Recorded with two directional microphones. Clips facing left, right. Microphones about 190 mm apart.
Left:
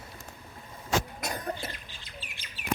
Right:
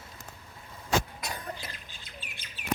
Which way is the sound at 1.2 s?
45° left (ahead or behind).